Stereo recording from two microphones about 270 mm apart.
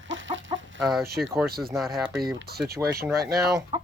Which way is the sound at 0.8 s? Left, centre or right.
Centre.